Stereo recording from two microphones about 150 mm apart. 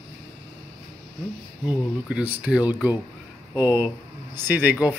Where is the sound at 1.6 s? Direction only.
10° right (ahead or behind).